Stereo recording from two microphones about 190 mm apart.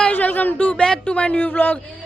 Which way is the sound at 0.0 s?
10° left (ahead or behind).